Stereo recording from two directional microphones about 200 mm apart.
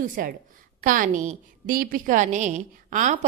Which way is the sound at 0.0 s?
45° right (ahead or behind).